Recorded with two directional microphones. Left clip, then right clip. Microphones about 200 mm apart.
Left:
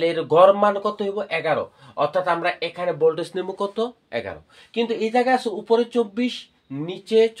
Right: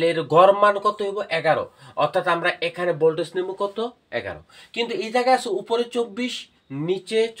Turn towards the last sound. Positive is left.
turn(degrees=30)  # may be behind; listen again after turning